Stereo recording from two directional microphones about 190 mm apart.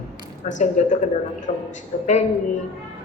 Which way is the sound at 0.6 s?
40° left (ahead or behind).